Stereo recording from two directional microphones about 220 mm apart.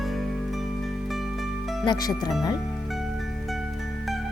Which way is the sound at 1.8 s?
20° left (ahead or behind).